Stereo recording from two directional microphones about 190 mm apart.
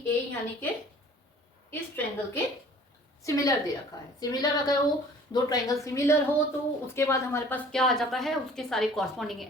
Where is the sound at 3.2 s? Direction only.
15° left (ahead or behind).